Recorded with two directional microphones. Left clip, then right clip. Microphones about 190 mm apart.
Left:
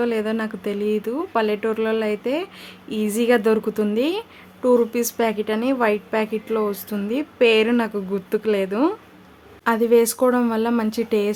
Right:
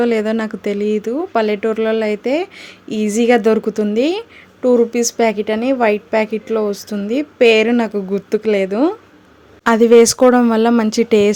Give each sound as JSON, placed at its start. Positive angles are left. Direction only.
{"t": 0.0, "sound": "speech", "side_deg": -30}
{"t": 9.6, "sound": "speech", "side_deg": -35}